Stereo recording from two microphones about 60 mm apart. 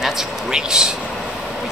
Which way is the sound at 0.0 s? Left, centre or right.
Centre.